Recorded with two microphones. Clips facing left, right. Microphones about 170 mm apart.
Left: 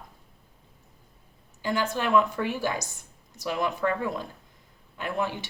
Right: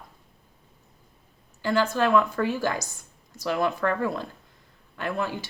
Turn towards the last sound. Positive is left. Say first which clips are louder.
# right 1 dB
turn(degrees=20)  # may be behind; listen again after turning